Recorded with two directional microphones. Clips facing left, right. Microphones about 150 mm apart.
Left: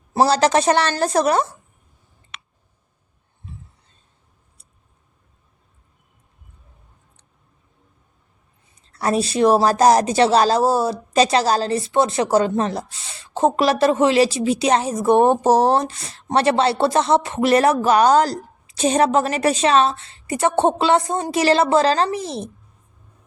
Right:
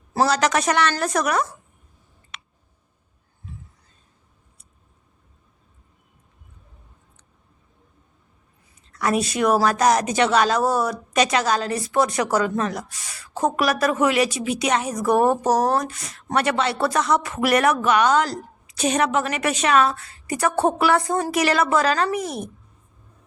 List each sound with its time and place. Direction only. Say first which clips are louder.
0.1 s a woman's voice: left 4 dB; 30° left (ahead or behind)
8.9 s a woman's voice: left 2 dB; 30° left (ahead or behind)